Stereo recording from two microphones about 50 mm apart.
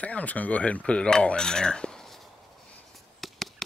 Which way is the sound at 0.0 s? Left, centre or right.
Left.